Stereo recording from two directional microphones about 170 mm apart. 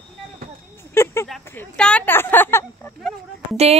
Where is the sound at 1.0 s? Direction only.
15° left (ahead or behind).